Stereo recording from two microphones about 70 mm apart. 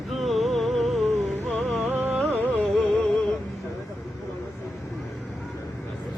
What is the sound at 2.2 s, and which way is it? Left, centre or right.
Music, right.